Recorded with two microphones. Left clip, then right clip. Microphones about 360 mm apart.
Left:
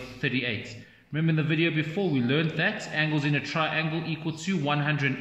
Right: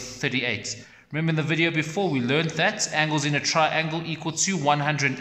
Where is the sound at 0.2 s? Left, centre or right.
Centre.